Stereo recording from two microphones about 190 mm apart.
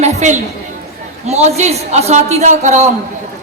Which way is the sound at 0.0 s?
40° right (ahead or behind).